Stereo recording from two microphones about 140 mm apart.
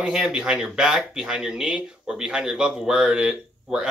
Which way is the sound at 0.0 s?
5° right (ahead or behind).